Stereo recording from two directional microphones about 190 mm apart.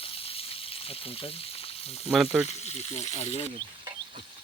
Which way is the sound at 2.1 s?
Centre (ahead or behind).